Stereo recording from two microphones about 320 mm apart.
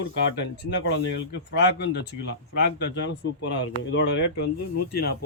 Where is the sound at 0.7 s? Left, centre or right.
Left.